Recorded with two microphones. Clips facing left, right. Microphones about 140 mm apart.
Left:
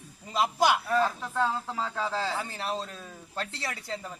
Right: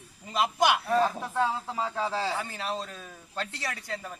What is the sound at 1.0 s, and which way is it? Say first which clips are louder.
Speech: right 1 dB; 10° right (ahead or behind).